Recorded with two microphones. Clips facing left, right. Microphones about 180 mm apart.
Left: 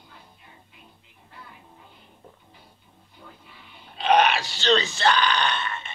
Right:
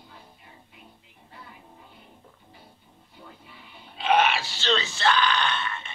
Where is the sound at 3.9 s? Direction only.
5° right (ahead or behind).